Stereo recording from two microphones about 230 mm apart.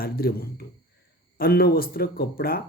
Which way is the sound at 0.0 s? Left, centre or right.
Left.